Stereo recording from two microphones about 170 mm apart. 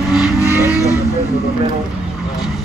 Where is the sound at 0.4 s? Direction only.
20° left (ahead or behind).